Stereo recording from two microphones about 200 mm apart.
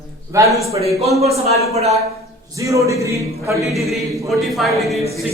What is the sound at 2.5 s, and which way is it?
A man's voice, 15° right (ahead or behind).